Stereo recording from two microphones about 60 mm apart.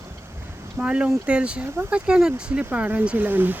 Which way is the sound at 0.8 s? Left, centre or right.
Centre.